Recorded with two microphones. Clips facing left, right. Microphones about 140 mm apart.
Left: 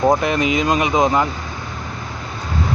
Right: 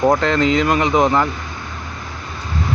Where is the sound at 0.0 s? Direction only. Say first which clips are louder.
Right 1 dB; 10° left (ahead or behind).